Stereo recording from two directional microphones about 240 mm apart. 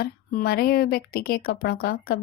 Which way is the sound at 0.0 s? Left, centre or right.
Left.